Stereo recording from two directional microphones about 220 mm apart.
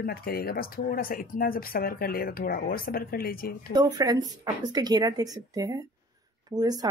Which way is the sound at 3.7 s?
15° right (ahead or behind).